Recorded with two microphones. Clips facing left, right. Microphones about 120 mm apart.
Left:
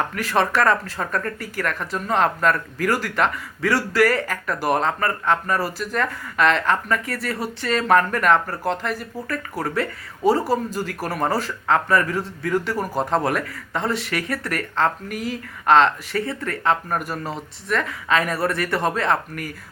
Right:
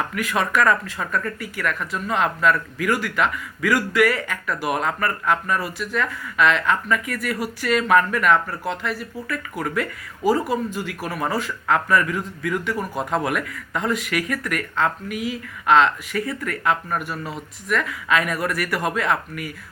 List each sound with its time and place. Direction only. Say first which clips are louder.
0.1 s speech: left 2 dB; 35° left (ahead or behind)
4.8 s speech: left 1 dB; 25° left (ahead or behind)